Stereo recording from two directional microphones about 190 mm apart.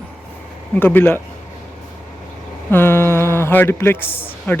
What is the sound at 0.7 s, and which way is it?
Speech, 10° left (ahead or behind).